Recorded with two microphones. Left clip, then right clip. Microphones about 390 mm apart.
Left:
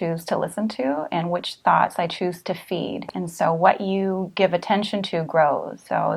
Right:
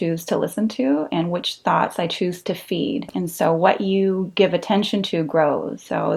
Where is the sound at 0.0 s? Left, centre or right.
Left.